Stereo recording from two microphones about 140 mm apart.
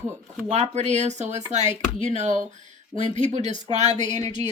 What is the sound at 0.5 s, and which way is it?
A woman's voice, 55° right (ahead or behind).